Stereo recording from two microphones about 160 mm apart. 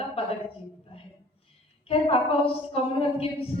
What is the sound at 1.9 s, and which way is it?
A woman's voice, 35° left (ahead or behind).